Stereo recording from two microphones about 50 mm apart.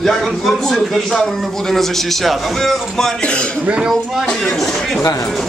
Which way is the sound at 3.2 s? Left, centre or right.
Left.